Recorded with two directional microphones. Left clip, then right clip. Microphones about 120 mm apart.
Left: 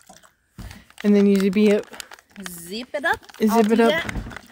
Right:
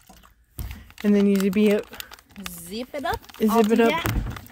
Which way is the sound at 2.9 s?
75° left (ahead or behind).